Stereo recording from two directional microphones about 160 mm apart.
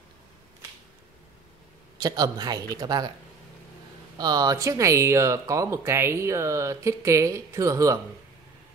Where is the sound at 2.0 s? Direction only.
25° right (ahead or behind).